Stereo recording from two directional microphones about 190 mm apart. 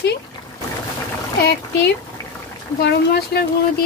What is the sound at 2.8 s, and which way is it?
Speech, 60° left (ahead or behind).